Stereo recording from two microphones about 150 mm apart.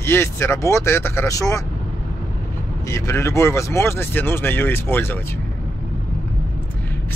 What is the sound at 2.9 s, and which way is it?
Speech, 20° left (ahead or behind).